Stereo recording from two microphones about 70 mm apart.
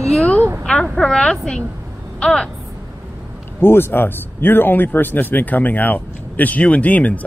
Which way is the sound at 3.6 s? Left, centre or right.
Left.